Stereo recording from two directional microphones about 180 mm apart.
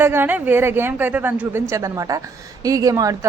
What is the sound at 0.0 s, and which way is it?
A woman's voice, 10° right (ahead or behind).